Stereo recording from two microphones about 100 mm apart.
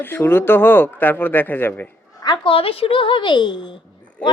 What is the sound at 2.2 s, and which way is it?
Speech, 45° left (ahead or behind).